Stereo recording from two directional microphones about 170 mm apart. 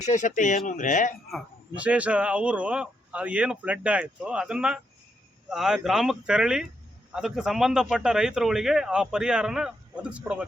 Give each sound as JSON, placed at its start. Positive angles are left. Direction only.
{"t": 0.0, "sound": "speech", "side_deg": 45}
{"t": 1.3, "sound": "speech", "side_deg": -5}